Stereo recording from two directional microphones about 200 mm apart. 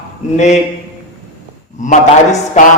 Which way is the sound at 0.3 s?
35° left (ahead or behind).